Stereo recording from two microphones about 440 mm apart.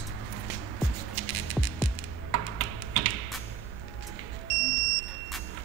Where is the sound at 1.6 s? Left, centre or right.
Centre.